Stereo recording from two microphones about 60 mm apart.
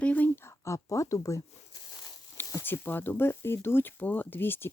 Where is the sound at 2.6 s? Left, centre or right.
Left.